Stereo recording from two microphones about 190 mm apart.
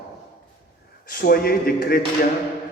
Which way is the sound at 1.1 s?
50° left (ahead or behind).